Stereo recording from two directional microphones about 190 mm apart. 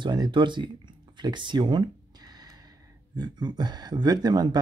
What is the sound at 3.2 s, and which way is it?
Speech, 20° right (ahead or behind).